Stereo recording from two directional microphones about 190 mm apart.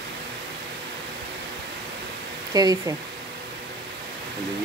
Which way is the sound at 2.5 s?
20° right (ahead or behind).